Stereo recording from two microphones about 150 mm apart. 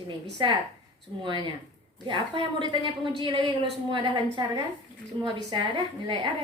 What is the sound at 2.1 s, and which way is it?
A woman's voice, 30° right (ahead or behind).